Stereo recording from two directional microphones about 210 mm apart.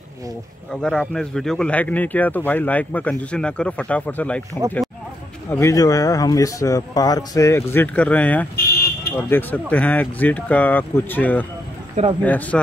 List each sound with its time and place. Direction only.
0.8 s speech: 5° left (ahead or behind)
5.5 s speech: 15° left (ahead or behind)
8.5 s a sound: 45° left (ahead or behind)
9.3 s speech: 10° left (ahead or behind)